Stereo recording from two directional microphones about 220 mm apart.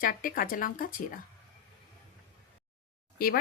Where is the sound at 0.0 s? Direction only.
40° left (ahead or behind).